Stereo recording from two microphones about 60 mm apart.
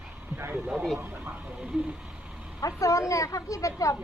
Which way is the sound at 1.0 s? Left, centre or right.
Right.